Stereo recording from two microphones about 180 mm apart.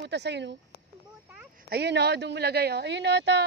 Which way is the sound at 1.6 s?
65° right (ahead or behind).